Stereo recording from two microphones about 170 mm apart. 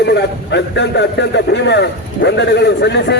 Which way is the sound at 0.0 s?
80° left.